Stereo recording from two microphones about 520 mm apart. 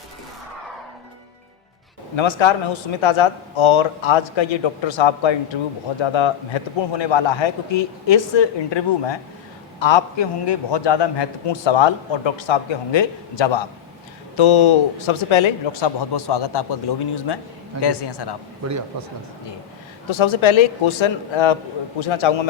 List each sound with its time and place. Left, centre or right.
2.1 s a man's voice: left
18.6 s a man's voice: right
20.1 s a man's voice: left